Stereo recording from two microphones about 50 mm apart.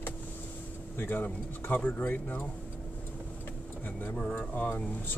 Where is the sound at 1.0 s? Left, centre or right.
Left.